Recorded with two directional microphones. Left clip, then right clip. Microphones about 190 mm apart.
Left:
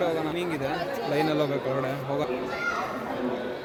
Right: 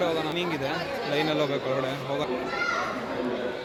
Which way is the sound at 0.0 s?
15° left (ahead or behind).